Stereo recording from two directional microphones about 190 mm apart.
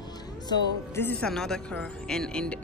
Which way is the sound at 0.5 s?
15° left (ahead or behind).